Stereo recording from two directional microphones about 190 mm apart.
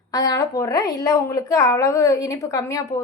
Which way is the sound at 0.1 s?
20° left (ahead or behind).